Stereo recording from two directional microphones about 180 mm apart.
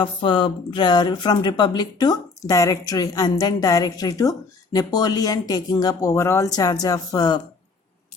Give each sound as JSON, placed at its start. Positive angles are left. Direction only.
{"t": 0.0, "sound": "speech", "side_deg": 25}